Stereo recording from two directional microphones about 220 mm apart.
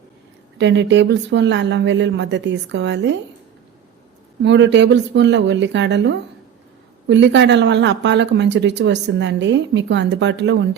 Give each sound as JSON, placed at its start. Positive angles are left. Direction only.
{"t": 0.6, "sound": "speech", "side_deg": -55}
{"t": 4.4, "sound": "speech", "side_deg": -55}